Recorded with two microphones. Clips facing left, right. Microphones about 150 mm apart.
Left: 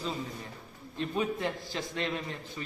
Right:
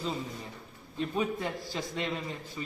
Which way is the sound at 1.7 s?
20° right (ahead or behind).